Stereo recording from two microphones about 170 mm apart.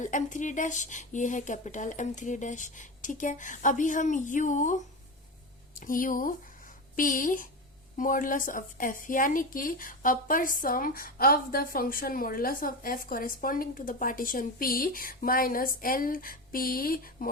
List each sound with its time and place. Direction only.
0.0 s speech: 50° left (ahead or behind)
5.8 s a woman's voice: 55° left (ahead or behind)